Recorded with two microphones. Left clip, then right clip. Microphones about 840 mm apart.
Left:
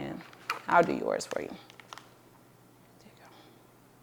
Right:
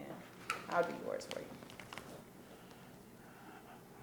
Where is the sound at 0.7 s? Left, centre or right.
Left.